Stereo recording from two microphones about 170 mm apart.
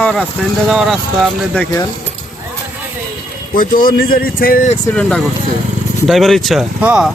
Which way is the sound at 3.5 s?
55° left (ahead or behind).